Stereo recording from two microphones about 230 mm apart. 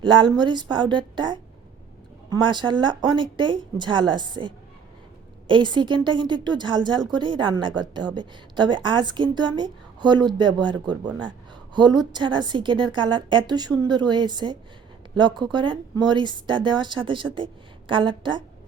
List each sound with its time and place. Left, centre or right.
0.0 s a woman's voice: right